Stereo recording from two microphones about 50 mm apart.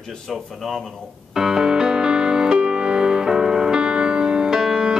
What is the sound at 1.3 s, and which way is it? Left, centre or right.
Music, centre.